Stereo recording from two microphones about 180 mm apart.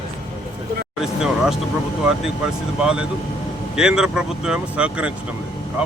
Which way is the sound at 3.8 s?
5° right (ahead or behind).